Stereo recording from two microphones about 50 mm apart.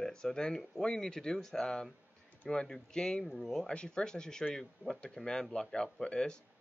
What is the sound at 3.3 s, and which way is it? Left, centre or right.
Speech, centre.